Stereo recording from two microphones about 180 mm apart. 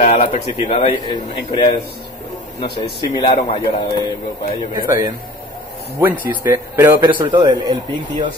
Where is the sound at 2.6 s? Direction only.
60° left (ahead or behind).